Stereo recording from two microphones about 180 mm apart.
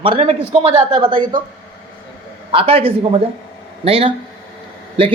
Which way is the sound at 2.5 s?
30° right (ahead or behind).